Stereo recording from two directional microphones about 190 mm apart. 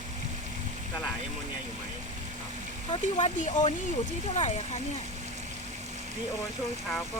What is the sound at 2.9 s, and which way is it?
Speech, 30° left (ahead or behind).